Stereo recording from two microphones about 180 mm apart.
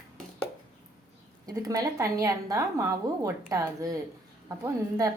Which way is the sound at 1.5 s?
20° right (ahead or behind).